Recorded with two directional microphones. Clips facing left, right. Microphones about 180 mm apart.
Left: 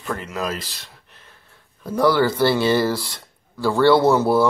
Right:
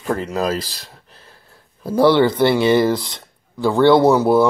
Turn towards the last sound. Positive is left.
turn(degrees=-15)  # may be behind; listen again after turning